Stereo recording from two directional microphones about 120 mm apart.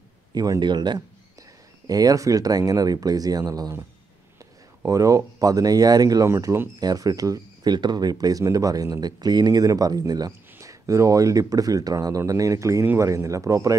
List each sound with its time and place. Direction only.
0.3 s speech: 35° right (ahead or behind)
4.8 s speech: 25° right (ahead or behind)
6.8 s speech: 30° right (ahead or behind)